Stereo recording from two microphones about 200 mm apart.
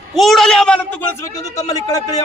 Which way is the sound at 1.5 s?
15° left (ahead or behind).